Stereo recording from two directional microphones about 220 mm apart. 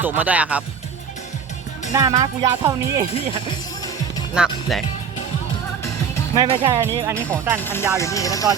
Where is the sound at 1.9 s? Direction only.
15° right (ahead or behind).